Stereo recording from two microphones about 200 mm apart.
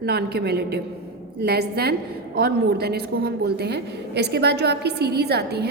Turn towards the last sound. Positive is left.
turn(degrees=-55)  # may be behind; listen again after turning